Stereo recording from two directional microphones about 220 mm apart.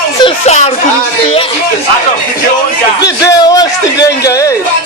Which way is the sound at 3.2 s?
15° left (ahead or behind).